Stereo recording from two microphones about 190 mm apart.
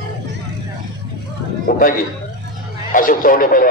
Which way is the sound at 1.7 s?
50° left (ahead or behind).